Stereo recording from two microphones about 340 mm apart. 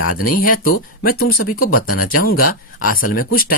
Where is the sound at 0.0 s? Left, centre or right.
Left.